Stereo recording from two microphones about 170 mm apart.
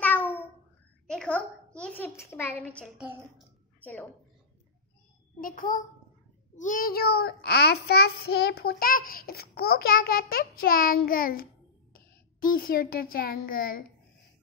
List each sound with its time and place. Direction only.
0.0 s meow: 10° left (ahead or behind)
1.0 s a sound: 5° left (ahead or behind)
1.8 s a child's voice: 10° left (ahead or behind)
3.0 s a woman's voice: 5° right (ahead or behind)
3.8 s a child's voice: 10° left (ahead or behind)
5.4 s a child's voice: 55° left (ahead or behind)
6.5 s child singing: 50° left (ahead or behind)
11.9 s a child's voice: 55° left (ahead or behind)